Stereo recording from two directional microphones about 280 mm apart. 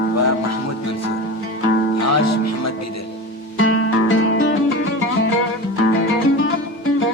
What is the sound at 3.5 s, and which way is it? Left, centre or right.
Music, left.